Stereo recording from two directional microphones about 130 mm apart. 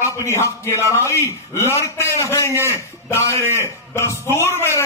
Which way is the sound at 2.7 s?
20° left (ahead or behind).